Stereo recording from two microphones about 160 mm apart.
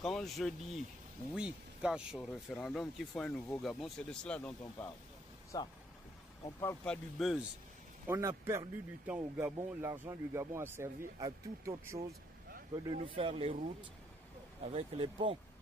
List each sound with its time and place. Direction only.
0.0 s speech: centre (ahead or behind)
5.5 s speech: 20° left (ahead or behind)
6.6 s speech: 10° left (ahead or behind)
8.1 s speech: 15° right (ahead or behind)
12.8 s speech: 30° right (ahead or behind)
14.6 s speech: 40° right (ahead or behind)